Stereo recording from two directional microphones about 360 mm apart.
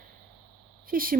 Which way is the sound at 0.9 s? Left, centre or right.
Right.